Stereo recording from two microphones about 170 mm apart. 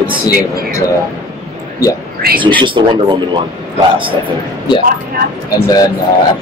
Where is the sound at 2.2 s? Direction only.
65° right (ahead or behind).